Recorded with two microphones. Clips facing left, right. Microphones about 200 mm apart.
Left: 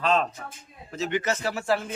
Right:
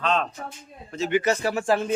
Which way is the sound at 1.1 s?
15° right (ahead or behind).